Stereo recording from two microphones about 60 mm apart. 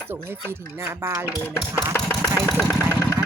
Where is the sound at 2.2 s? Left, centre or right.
Centre.